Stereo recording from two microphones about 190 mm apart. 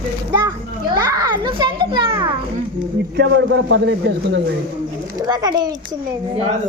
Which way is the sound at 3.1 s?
70° right (ahead or behind).